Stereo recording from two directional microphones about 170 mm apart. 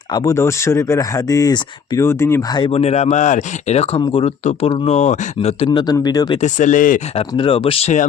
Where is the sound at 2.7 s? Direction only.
40° left (ahead or behind).